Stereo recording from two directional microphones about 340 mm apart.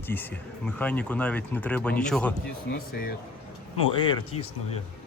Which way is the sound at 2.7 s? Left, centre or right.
Left.